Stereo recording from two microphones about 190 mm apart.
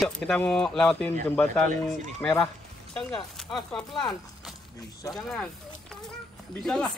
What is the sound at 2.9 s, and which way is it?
Speech, centre (ahead or behind).